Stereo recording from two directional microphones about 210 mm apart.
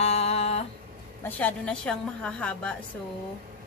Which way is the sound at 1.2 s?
5° left (ahead or behind).